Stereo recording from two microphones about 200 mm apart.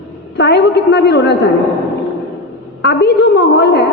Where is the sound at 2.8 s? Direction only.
55° left (ahead or behind).